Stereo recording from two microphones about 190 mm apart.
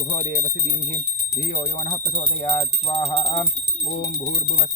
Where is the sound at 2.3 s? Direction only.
15° left (ahead or behind).